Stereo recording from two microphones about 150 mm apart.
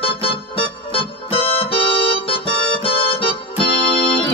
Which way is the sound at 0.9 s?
40° left (ahead or behind).